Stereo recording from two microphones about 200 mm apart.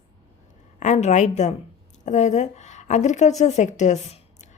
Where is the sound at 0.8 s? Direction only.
35° left (ahead or behind).